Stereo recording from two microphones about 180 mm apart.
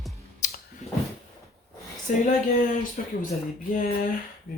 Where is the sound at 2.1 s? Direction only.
45° left (ahead or behind).